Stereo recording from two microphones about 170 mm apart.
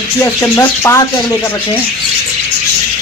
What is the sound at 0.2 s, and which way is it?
Speech, 20° left (ahead or behind).